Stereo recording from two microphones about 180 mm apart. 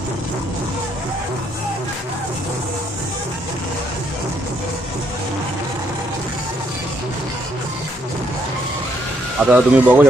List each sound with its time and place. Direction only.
9.4 s speech: 10° right (ahead or behind)